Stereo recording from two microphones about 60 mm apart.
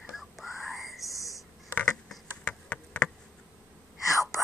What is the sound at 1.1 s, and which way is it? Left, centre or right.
Whispering, left.